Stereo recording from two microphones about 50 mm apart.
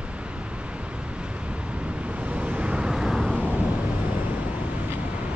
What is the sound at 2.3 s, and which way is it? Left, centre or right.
Vehicle, right.